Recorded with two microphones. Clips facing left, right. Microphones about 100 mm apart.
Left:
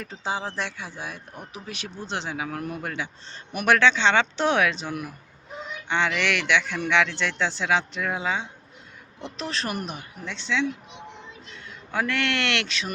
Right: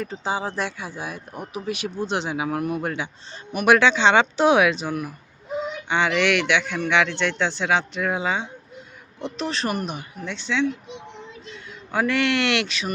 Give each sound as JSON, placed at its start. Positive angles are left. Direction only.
{"t": 0.0, "sound": "a man's voice", "side_deg": 0}
{"t": 3.5, "sound": "a man's voice", "side_deg": 0}
{"t": 3.8, "sound": "a man's voice", "side_deg": -15}